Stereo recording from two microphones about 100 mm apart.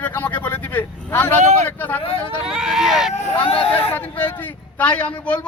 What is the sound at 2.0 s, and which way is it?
Speech, 65° left (ahead or behind).